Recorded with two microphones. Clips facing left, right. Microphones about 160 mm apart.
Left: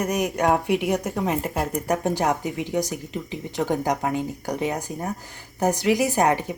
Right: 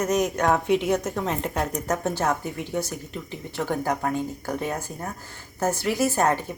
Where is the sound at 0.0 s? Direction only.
10° left (ahead or behind).